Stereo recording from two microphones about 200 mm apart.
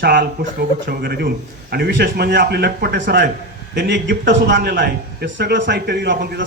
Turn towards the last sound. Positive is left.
turn(degrees=-55)  # may be behind; listen again after turning